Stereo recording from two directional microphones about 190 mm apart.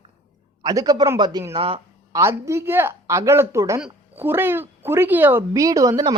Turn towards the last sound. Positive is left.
turn(degrees=-20)  # may be behind; listen again after turning